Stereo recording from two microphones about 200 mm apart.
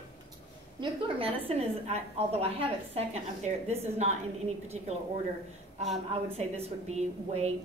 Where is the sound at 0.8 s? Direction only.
25° right (ahead or behind).